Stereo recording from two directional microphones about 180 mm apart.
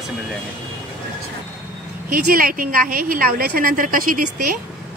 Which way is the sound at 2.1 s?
50° right (ahead or behind).